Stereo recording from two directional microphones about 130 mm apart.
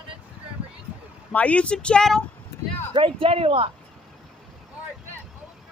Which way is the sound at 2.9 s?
45° right (ahead or behind).